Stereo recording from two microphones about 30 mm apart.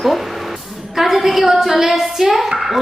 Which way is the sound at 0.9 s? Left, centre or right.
Centre.